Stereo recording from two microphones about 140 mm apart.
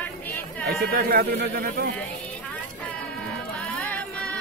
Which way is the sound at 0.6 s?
90° right.